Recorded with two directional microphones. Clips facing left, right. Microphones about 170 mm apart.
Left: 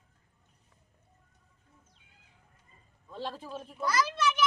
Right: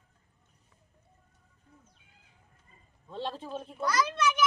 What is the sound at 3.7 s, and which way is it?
Speech, centre (ahead or behind).